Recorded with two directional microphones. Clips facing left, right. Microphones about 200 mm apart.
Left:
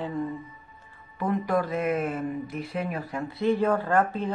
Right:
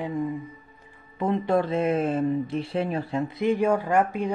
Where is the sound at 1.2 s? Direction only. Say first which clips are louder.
Right 3 dB; 25° right (ahead or behind).